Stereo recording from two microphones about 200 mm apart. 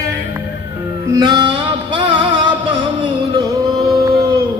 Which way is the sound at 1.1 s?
20° right (ahead or behind).